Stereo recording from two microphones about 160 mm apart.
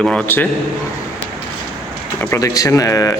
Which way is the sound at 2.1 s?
20° left (ahead or behind).